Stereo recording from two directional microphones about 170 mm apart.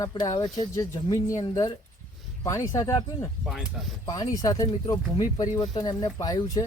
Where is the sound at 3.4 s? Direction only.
Centre (ahead or behind).